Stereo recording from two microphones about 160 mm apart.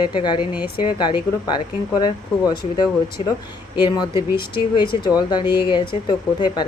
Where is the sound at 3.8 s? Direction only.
25° left (ahead or behind).